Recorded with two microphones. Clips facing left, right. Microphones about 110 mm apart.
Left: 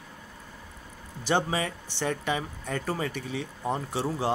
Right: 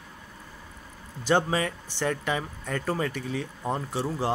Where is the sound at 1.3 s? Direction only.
20° left (ahead or behind).